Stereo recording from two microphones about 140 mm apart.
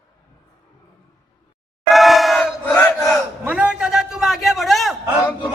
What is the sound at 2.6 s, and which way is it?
Battle cry, 15° left (ahead or behind).